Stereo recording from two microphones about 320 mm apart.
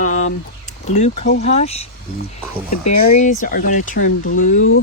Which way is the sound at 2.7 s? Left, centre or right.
Left.